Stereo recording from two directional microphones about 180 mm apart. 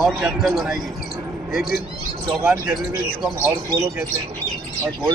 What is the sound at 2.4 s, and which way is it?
Speech, centre (ahead or behind).